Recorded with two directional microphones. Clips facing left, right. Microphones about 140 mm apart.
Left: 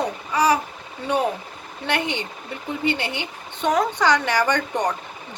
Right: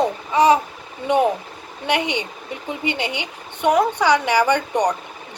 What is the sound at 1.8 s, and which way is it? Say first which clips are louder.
Speech: right 3 dB; 15° right (ahead or behind).